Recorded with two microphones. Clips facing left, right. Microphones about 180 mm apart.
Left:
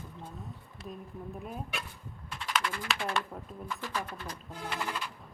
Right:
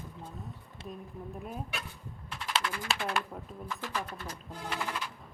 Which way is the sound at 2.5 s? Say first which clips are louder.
Even; 30° right (ahead or behind).